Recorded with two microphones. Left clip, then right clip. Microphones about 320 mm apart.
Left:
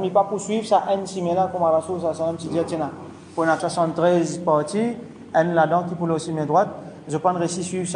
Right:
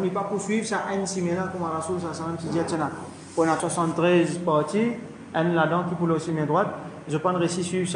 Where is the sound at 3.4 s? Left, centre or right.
Centre.